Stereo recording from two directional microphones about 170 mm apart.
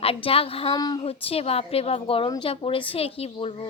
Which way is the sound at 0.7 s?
25° left (ahead or behind).